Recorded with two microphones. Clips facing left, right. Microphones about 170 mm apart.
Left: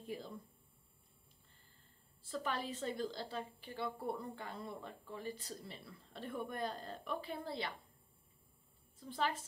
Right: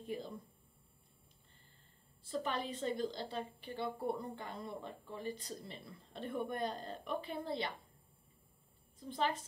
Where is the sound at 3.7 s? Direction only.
20° right (ahead or behind).